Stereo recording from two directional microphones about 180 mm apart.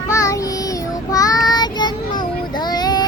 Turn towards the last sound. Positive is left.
turn(degrees=20)  # may be behind; listen again after turning